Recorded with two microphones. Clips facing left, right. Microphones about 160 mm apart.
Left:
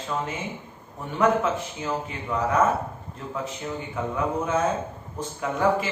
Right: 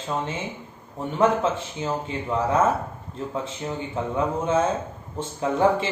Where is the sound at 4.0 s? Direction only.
30° right (ahead or behind).